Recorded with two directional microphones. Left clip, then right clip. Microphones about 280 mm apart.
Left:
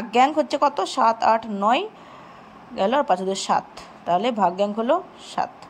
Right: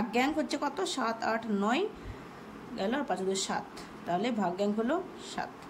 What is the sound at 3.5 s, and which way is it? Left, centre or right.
A woman's voice, left.